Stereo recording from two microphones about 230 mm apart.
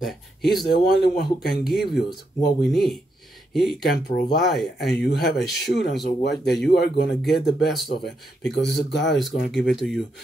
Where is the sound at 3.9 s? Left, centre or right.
Left.